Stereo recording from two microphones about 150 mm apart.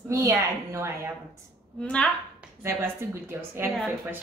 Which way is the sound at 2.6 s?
15° right (ahead or behind).